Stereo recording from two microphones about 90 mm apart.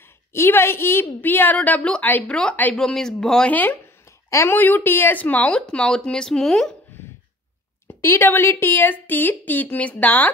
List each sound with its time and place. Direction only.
0.3 s a woman's voice: 30° left (ahead or behind)
2.7 s speech: 5° left (ahead or behind)
4.5 s speech: 20° left (ahead or behind); by 6.7 s 5° left (ahead or behind)
8.0 s a woman's voice: 30° left (ahead or behind)